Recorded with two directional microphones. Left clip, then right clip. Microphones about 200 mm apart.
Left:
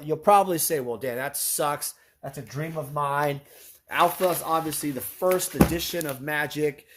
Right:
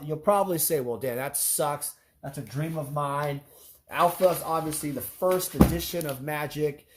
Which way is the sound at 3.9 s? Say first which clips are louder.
Even; 35° left (ahead or behind).